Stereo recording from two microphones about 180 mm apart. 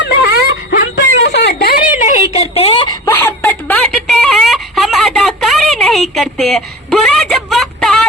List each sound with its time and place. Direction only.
0.0 s wail: 65° left (ahead or behind); by 2.9 s 30° left (ahead or behind)
3.2 s wail: 10° left (ahead or behind)